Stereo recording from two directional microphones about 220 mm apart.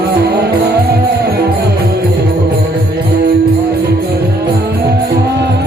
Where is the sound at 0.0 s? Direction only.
45° right (ahead or behind).